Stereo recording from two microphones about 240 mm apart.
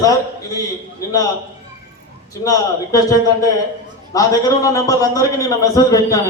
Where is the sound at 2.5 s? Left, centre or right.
Centre.